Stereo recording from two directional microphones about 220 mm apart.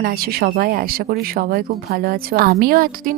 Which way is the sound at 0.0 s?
45° right (ahead or behind).